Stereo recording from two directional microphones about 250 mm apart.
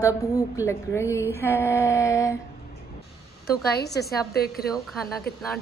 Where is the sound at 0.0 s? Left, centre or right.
Centre.